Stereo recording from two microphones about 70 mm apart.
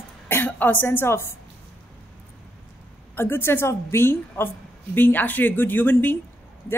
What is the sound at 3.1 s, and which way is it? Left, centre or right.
Speech, left.